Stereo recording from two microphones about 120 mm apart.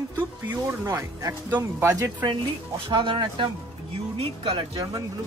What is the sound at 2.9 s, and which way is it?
Speech, 45° right (ahead or behind).